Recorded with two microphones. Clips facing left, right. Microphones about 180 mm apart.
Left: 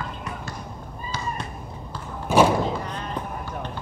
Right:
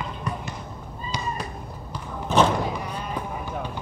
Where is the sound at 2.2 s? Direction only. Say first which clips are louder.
Left 2 dB; 10° left (ahead or behind).